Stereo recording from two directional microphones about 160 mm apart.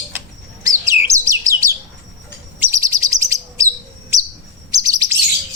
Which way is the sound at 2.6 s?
20° right (ahead or behind).